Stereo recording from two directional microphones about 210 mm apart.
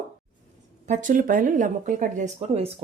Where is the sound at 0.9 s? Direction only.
40° right (ahead or behind).